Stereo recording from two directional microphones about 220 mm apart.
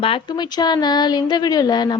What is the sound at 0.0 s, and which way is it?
Speech, 20° left (ahead or behind).